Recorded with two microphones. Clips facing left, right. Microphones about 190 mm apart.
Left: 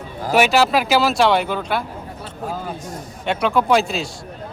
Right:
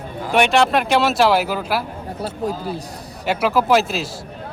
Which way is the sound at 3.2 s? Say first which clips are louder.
Right 1 dB; 5° right (ahead or behind).